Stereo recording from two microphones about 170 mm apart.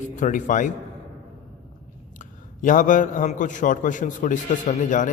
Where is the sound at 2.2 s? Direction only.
50° left (ahead or behind).